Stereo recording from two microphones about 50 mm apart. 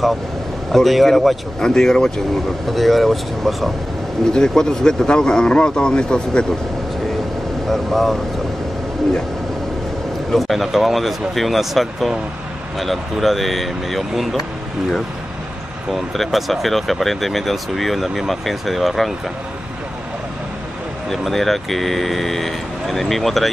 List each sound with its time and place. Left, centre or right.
0.7 s speech: centre
1.6 s a man's voice: centre
4.3 s a man's voice: centre
7.6 s speech: centre
10.3 s speech: centre
15.9 s speech: centre
21.1 s speech: centre